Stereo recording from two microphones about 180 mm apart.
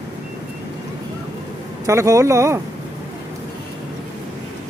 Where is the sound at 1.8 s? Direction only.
15° right (ahead or behind).